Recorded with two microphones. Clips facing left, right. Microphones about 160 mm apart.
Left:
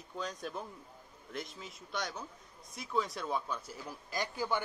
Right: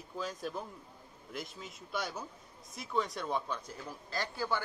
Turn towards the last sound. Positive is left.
turn(degrees=15)  # may be behind; listen again after turning